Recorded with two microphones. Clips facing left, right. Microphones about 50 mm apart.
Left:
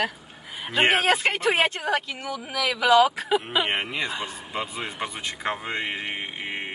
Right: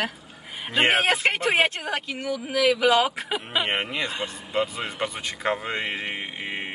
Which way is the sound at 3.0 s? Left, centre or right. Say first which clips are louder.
Left 4 dB; right.